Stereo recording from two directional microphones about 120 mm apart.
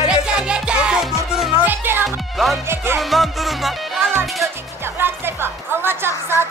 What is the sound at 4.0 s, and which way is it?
Music, 20° right (ahead or behind).